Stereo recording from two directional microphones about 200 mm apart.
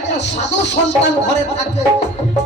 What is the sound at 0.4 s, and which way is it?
Speech, 60° left (ahead or behind).